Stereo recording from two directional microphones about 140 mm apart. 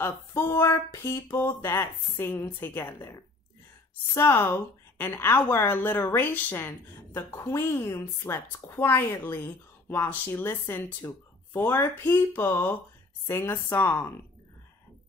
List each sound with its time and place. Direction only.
0.0 s a woman's voice: 20° left (ahead or behind)